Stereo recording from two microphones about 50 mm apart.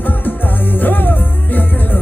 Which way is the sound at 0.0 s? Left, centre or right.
Left.